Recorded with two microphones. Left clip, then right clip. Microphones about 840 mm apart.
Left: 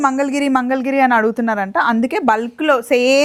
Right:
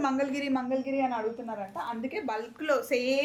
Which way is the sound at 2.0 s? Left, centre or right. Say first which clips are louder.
Left 17 dB; left.